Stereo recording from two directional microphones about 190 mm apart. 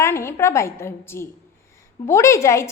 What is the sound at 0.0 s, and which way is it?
A woman's voice, 15° left (ahead or behind).